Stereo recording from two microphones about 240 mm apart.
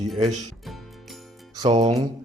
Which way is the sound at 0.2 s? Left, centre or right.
Right.